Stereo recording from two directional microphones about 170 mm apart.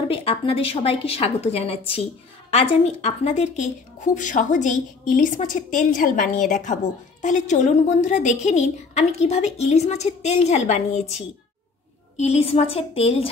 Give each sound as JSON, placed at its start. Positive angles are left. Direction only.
{"t": 0.1, "sound": "a woman's voice", "side_deg": 35}